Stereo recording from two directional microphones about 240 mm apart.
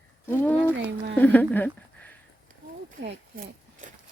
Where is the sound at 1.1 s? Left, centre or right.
Centre.